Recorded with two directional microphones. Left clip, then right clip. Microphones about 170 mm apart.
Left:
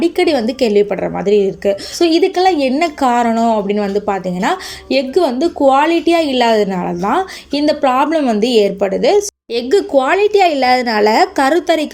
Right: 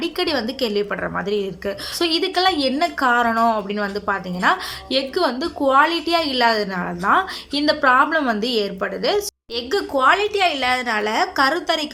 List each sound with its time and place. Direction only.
0.0 s a woman's voice: 20° left (ahead or behind)